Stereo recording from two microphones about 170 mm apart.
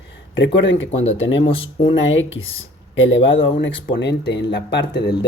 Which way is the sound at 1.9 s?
90° left.